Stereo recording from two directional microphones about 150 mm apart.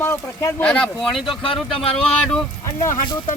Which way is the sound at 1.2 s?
35° left (ahead or behind).